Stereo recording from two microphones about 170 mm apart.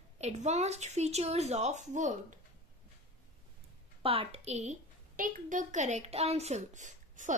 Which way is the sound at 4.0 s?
35° right (ahead or behind).